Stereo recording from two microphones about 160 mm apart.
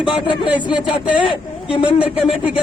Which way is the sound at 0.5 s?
5° right (ahead or behind).